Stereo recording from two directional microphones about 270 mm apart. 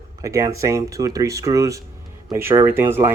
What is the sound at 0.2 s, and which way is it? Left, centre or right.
Speech, centre.